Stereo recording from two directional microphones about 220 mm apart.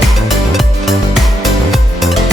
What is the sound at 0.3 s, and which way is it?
Music, centre (ahead or behind).